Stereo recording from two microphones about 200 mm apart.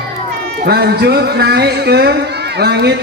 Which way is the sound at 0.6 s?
55° right (ahead or behind).